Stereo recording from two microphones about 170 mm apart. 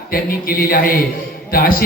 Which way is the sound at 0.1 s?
60° left (ahead or behind).